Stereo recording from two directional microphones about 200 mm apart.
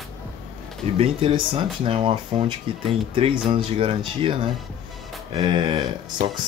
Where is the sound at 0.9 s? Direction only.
25° right (ahead or behind).